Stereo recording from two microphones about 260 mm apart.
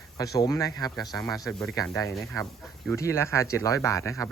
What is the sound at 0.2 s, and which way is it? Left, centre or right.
Speech, centre.